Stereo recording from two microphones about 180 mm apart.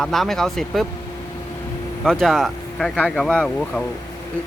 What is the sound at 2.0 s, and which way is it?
Speech, centre (ahead or behind).